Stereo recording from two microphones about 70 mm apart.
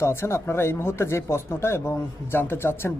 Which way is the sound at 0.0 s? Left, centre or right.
Left.